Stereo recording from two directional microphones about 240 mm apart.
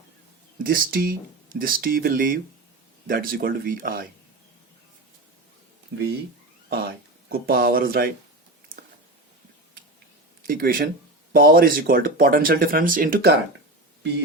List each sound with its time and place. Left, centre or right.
0.6 s speech: right
6.7 s speech: right
10.4 s speech: right